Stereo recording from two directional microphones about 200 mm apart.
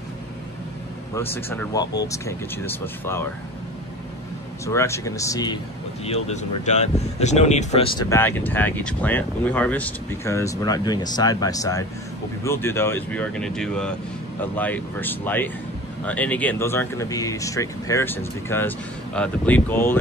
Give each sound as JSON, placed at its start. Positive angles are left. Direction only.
{"t": 1.1, "sound": "speech", "side_deg": 10}
{"t": 4.6, "sound": "speech", "side_deg": 15}
{"t": 6.0, "sound": "speech", "side_deg": 35}
{"t": 8.1, "sound": "speech", "side_deg": 10}